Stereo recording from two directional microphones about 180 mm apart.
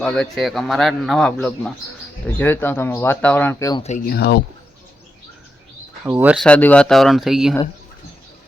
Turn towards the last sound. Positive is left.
turn(degrees=0)  # may be behind; listen again after turning